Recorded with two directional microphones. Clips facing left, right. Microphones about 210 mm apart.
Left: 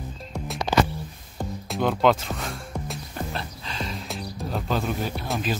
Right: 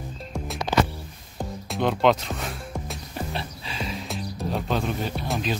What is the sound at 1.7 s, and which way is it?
Music, centre (ahead or behind).